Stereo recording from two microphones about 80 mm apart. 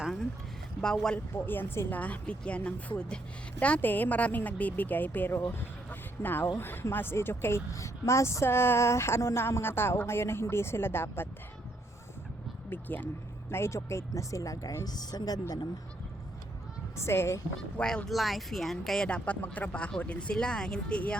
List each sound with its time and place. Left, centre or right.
1.5 s a woman's voice: left
2.0 s a woman's voice: centre
12.7 s a woman's voice: left
13.5 s speech: left
14.8 s a woman's voice: left
17.0 s speech: left
17.7 s speech: centre
19.0 s speech: centre